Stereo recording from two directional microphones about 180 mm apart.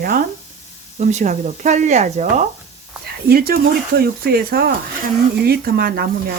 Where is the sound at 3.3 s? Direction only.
55° right (ahead or behind).